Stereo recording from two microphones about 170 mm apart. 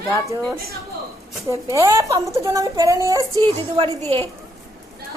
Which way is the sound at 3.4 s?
30° right (ahead or behind).